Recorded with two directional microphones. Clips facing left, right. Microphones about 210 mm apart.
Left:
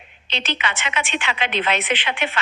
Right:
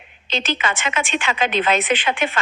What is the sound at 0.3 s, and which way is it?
A woman's voice, 45° right (ahead or behind).